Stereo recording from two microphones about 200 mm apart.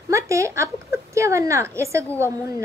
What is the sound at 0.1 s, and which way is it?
A woman's voice, 15° right (ahead or behind).